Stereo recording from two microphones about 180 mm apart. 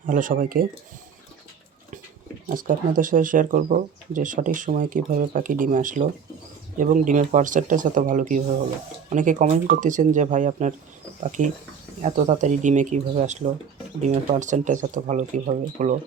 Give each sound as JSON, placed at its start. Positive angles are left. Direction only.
{"t": 0.0, "sound": "speech", "side_deg": -50}
{"t": 2.5, "sound": "speech", "side_deg": -50}